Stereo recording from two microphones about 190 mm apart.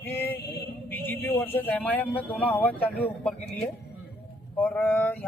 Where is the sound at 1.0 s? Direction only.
10° left (ahead or behind).